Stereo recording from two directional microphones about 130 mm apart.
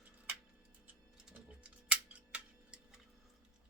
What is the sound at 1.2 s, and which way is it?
Tick-tock, 10° right (ahead or behind).